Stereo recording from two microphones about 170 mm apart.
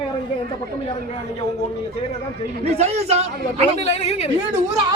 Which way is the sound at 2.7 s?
40° right (ahead or behind).